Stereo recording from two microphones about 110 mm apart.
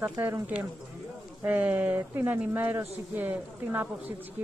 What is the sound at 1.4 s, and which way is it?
Speech, 15° right (ahead or behind).